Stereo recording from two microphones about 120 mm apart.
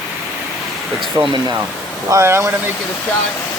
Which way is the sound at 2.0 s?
25° right (ahead or behind).